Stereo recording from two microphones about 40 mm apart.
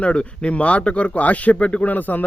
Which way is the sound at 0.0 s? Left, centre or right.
Left.